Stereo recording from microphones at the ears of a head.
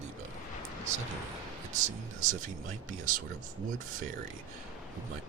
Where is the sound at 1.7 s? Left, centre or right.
Right.